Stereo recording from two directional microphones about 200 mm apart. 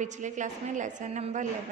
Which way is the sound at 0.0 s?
40° right (ahead or behind).